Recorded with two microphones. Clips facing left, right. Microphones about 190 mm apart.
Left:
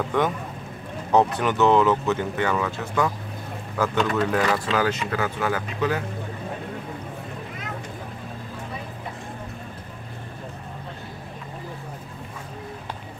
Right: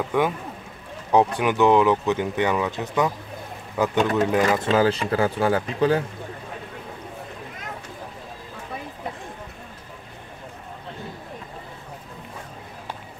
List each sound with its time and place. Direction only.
0.1 s speech: 10° right (ahead or behind)
4.6 s speech: 30° right (ahead or behind)